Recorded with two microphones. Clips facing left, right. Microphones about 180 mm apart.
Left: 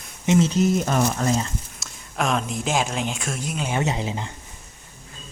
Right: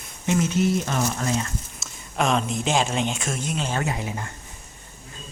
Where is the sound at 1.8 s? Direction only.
Centre (ahead or behind).